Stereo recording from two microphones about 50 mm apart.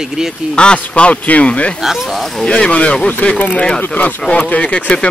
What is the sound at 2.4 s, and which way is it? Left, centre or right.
Speech, left.